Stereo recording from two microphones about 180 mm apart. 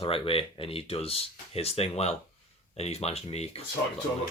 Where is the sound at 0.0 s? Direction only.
30° left (ahead or behind).